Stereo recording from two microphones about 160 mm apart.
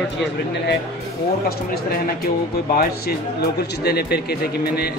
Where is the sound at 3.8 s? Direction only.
85° left.